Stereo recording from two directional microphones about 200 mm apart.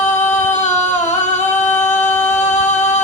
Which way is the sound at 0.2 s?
35° left (ahead or behind).